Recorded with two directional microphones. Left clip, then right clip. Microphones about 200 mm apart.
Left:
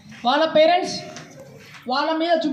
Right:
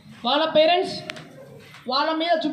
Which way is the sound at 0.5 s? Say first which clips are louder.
Left 2 dB; 45° right (ahead or behind).